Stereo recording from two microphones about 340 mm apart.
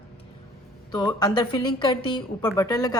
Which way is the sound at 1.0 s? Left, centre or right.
Centre.